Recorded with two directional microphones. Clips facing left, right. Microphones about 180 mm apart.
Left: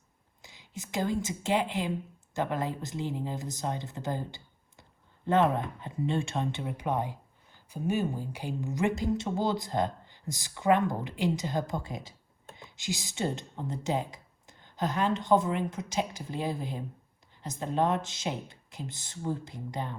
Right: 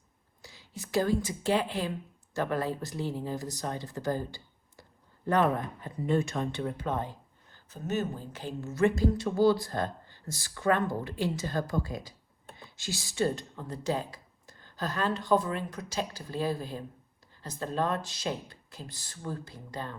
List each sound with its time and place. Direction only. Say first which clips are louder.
0.4 s speech: left 1 dB; 20° left (ahead or behind)